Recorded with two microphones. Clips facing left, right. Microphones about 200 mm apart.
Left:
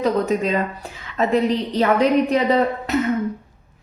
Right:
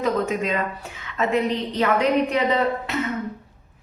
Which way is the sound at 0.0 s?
35° left (ahead or behind).